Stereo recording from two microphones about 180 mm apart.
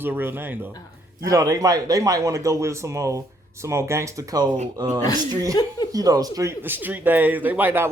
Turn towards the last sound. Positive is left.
turn(degrees=-10)  # may be behind; listen again after turning